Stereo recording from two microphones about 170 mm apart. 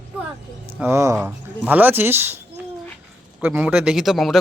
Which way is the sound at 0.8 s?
15° right (ahead or behind).